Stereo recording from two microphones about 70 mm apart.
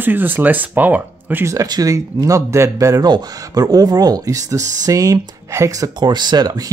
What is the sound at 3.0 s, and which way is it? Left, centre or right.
Speech, right.